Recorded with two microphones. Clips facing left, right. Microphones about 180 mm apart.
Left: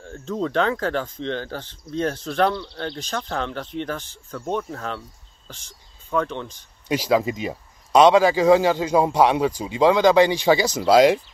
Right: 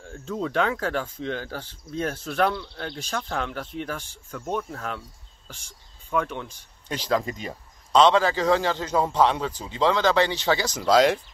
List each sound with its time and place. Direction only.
0.0 s speech: 5° right (ahead or behind)
6.9 s speech: 10° left (ahead or behind)